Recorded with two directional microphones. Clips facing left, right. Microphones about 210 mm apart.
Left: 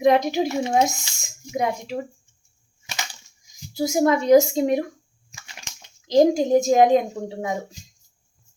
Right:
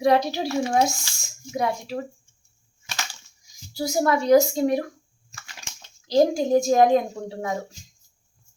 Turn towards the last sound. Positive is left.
turn(degrees=15)  # may be behind; listen again after turning